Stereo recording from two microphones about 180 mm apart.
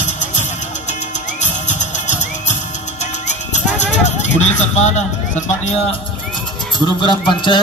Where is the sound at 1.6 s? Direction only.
40° left (ahead or behind).